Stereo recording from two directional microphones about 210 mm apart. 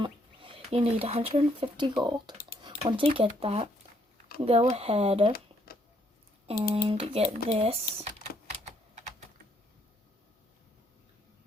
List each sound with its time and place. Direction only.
0.0 s speech: 25° right (ahead or behind)
6.5 s speech: 25° right (ahead or behind)